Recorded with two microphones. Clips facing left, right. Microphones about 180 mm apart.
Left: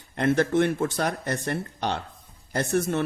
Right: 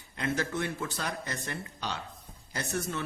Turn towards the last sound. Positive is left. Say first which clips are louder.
# left 9 dB
turn(degrees=55)  # may be behind; listen again after turning